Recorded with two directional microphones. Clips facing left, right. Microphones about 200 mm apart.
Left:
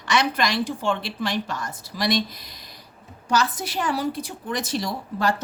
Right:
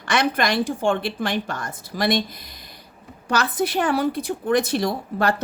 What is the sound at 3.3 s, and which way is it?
A woman's voice, 60° right (ahead or behind).